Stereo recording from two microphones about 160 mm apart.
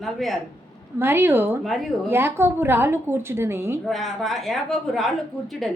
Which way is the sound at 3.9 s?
Centre (ahead or behind).